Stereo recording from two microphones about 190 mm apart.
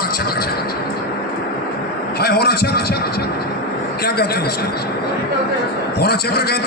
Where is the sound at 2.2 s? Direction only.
55° left (ahead or behind).